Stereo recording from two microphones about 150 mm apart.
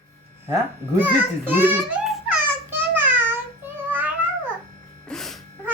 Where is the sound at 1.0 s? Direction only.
15° right (ahead or behind).